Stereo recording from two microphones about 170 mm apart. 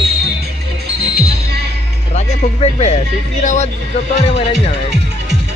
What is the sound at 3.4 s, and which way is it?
Speech, 45° left (ahead or behind).